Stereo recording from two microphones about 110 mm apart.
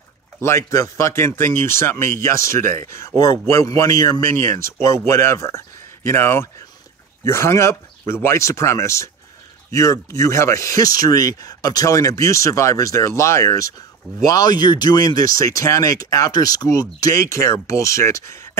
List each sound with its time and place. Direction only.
0.4 s speech: 25° left (ahead or behind)